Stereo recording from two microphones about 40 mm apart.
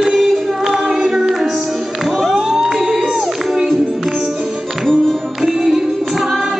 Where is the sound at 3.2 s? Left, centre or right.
Centre.